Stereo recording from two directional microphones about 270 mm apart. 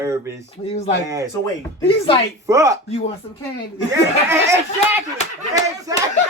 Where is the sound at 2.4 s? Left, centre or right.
Centre.